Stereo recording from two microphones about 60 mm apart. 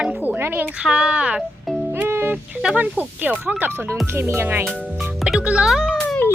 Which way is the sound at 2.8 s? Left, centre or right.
Right.